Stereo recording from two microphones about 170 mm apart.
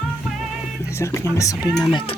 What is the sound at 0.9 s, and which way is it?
Speech, 15° left (ahead or behind).